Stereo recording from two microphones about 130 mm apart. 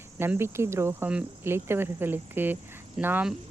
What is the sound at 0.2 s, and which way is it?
Speech, 20° right (ahead or behind).